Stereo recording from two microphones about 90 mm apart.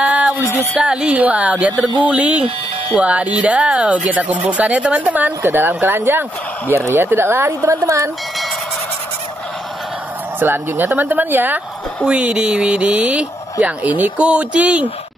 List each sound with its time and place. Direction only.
0.0 s music: 15° right (ahead or behind)
0.7 s speech: 10° right (ahead or behind); by 8.1 s 35° right (ahead or behind)
10.4 s speech: 20° right (ahead or behind)